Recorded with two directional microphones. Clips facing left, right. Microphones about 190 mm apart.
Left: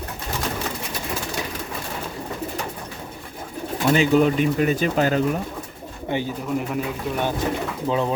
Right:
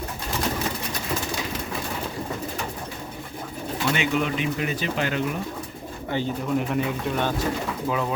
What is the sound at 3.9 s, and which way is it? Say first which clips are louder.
Speech: left 8 dB; 40° left (ahead or behind).